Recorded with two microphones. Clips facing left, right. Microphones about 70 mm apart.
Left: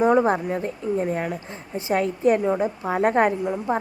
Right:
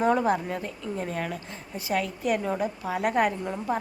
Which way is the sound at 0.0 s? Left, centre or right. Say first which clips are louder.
Left 5 dB; left.